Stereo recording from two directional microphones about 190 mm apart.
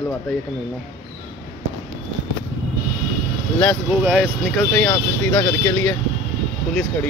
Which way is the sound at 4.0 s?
Centre (ahead or behind).